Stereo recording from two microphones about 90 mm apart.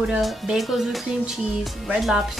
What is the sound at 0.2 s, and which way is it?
A woman's voice, centre (ahead or behind).